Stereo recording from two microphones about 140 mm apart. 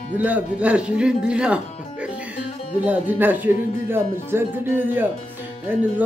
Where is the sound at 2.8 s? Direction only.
15° right (ahead or behind).